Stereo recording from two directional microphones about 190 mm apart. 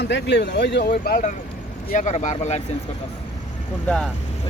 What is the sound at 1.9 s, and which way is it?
Speech, 40° left (ahead or behind).